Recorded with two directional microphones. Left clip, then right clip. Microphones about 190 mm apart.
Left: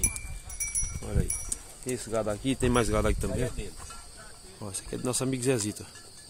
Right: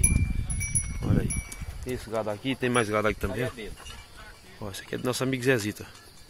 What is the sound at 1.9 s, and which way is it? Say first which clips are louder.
Speech: even; 20° left (ahead or behind).